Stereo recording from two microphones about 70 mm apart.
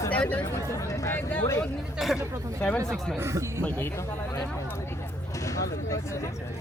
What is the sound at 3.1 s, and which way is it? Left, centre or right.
Speech, right.